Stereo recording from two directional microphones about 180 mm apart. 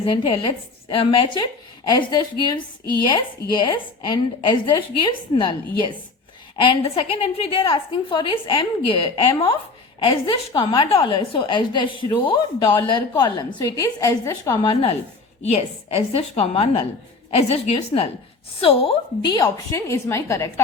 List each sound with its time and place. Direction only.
0.0 s a woman's voice: 30° left (ahead or behind)
3.5 s a woman's voice: 25° left (ahead or behind)
14.6 s a woman's voice: 30° left (ahead or behind)